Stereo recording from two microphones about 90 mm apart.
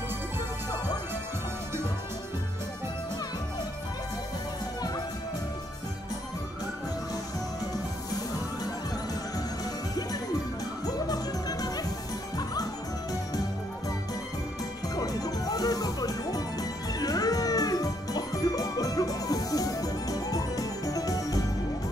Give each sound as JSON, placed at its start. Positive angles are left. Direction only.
{"t": 11.1, "sound": "music", "side_deg": 45}
{"t": 15.0, "sound": "music", "side_deg": 45}